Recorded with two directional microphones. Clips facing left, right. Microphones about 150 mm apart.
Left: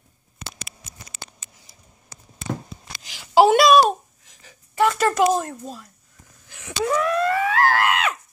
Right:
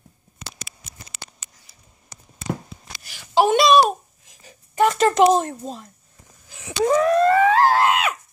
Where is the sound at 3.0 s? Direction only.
15° left (ahead or behind).